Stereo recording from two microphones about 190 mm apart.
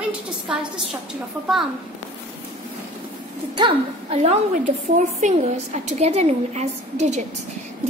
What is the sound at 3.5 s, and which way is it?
Speech, 25° right (ahead or behind).